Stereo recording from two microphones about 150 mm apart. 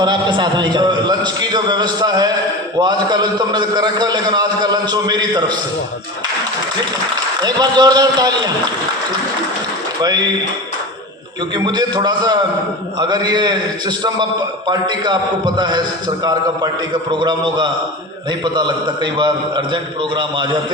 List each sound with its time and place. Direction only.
0.0 s a man's voice: 30° right (ahead or behind)
7.4 s a man's voice: 25° right (ahead or behind)
10.0 s a man's voice: 25° right (ahead or behind)
11.5 s a man's voice: 30° right (ahead or behind)